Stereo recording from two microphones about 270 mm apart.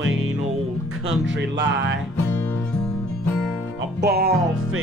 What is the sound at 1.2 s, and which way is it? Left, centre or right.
Music, right.